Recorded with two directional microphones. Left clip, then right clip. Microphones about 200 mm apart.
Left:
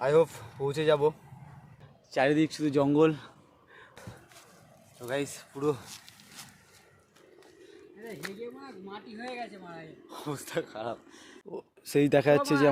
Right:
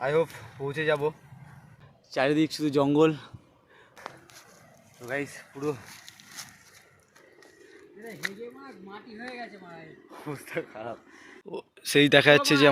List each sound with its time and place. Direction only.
0.0 s speech: 15° left (ahead or behind)
2.0 s speech: 5° right (ahead or behind)
5.2 s speech: 20° left (ahead or behind)
8.6 s speech: 55° left (ahead or behind)
10.1 s speech: 15° left (ahead or behind)
11.5 s speech: centre (ahead or behind)